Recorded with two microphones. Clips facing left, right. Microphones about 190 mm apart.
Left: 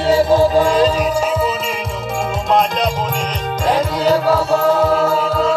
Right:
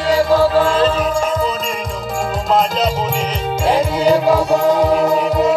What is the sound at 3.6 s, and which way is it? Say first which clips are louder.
Music: right 1 dB; 10° right (ahead or behind).